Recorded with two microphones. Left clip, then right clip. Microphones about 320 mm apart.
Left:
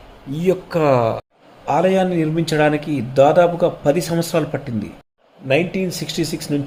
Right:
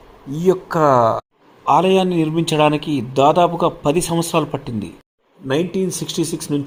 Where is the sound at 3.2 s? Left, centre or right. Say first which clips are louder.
Right 1 dB; centre.